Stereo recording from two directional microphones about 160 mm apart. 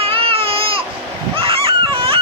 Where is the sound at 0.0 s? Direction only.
35° right (ahead or behind).